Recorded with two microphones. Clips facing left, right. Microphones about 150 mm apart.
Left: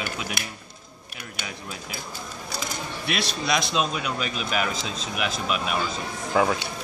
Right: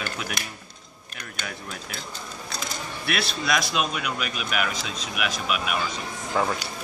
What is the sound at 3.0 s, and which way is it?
Speech, 20° left (ahead or behind).